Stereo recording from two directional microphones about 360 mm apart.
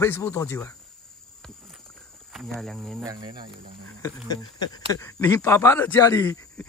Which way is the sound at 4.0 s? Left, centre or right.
Centre.